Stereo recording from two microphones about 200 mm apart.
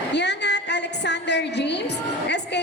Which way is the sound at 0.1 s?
60° left (ahead or behind).